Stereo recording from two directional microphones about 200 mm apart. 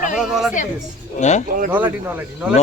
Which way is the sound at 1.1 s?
35° left (ahead or behind).